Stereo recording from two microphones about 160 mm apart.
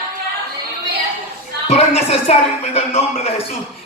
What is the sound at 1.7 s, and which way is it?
A man's voice, 40° left (ahead or behind).